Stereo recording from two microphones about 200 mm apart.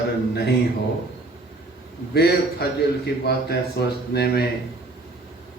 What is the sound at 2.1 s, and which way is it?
A man's voice, 55° left (ahead or behind).